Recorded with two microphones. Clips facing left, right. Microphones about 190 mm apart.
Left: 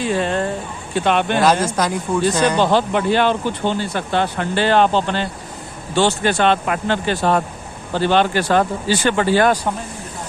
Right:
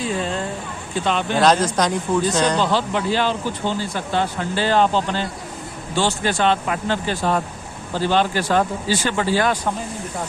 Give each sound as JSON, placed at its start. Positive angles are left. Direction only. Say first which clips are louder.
{"t": 0.0, "sound": "a sound", "louder": "left 4 dB", "side_deg": 65}
{"t": 0.9, "sound": "speech", "louder": "left 4 dB", "side_deg": 65}
{"t": 1.4, "sound": "speech", "louder": "even", "side_deg": 10}
{"t": 2.6, "sound": "speech", "louder": "left 4 dB", "side_deg": 55}